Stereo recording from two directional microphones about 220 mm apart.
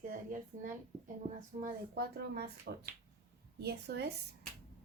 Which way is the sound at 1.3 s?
35° right (ahead or behind).